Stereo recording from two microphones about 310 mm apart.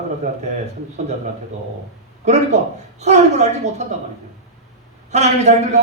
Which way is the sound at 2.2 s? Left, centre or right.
Right.